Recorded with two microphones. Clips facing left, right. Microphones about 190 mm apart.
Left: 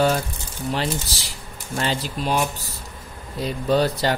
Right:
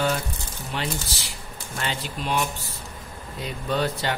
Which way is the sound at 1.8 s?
35° left (ahead or behind).